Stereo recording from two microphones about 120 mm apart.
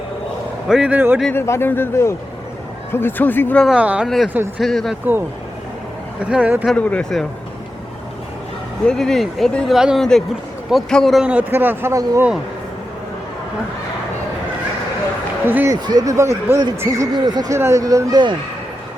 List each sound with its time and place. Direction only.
0.7 s speech: 10° right (ahead or behind)
1.3 s speech: 20° left (ahead or behind)
3.8 s speech: 10° right (ahead or behind)
4.6 s speech: centre (ahead or behind)
6.1 s speech: 10° right (ahead or behind)
6.7 s speech: 10° left (ahead or behind)
8.9 s speech: 5° left (ahead or behind); by 12.2 s 25° right (ahead or behind)
15.4 s speech: 15° right (ahead or behind)
15.7 s speech: 35° right (ahead or behind)